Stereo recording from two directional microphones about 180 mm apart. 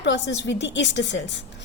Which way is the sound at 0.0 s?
75° left (ahead or behind).